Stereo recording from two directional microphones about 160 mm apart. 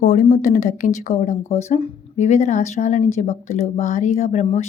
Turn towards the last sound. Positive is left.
turn(degrees=45)  # may be behind; listen again after turning